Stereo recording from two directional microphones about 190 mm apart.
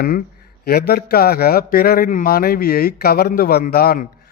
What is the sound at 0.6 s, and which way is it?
Speech, 55° left (ahead or behind).